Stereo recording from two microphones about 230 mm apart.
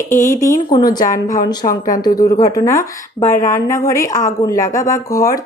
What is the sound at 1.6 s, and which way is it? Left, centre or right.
Speech, left.